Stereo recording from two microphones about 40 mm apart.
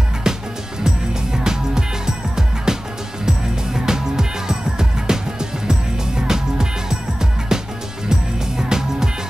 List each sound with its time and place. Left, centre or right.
0.3 s music: centre